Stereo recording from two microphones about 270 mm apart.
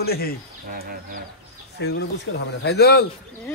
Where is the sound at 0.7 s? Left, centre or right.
Right.